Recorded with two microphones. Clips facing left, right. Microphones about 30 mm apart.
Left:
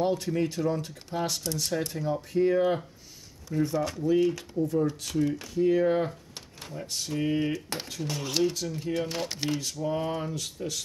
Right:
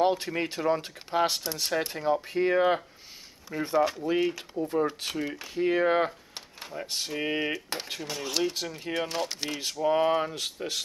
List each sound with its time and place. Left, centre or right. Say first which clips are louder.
0.0 s speech: right 1 dB; right
6.3 s a sound: right 1 dB; centre
6.8 s speech: left 1 dB; right
7.5 s speech: even; centre
9.8 s speech: right 7 dB; right